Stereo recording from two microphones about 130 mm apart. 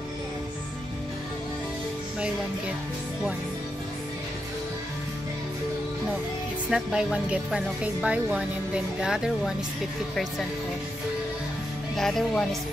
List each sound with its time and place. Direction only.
6.7 s speech: 5° right (ahead or behind)
12.0 s speech: 5° left (ahead or behind)